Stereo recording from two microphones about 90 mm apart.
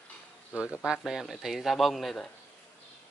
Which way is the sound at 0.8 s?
5° right (ahead or behind).